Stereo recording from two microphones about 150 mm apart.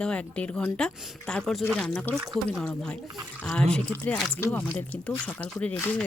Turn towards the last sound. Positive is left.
turn(degrees=5)  # may be behind; listen again after turning